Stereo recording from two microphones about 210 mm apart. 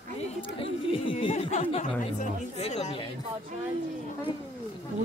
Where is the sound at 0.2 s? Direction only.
30° left (ahead or behind).